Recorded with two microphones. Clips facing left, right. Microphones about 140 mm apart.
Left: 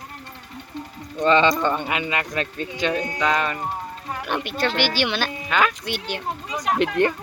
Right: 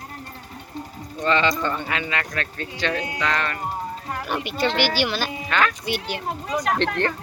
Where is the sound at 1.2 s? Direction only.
20° left (ahead or behind).